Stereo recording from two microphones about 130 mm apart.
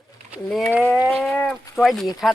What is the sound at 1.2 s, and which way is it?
Speech, 10° left (ahead or behind).